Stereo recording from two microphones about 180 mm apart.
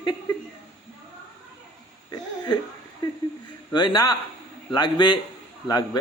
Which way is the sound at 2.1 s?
25° left (ahead or behind).